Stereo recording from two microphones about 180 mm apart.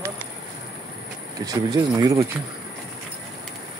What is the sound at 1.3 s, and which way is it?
Speech, 20° right (ahead or behind).